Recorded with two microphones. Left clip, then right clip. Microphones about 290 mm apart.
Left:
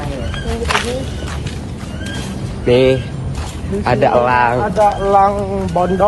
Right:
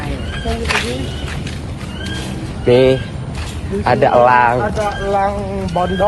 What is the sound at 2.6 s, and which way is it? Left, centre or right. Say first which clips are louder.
Speech: right 1 dB; centre.